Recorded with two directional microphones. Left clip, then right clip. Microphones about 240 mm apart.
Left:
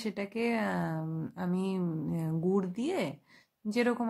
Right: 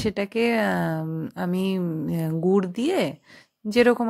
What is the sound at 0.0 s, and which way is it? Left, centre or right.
Speech, right.